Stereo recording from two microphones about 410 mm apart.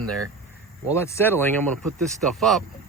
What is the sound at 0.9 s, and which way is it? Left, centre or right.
Speech, centre.